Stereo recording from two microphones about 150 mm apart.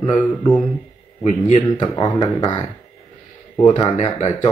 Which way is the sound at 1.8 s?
25° left (ahead or behind).